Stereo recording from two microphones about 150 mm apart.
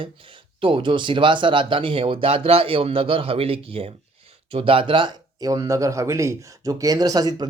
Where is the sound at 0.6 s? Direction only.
35° right (ahead or behind).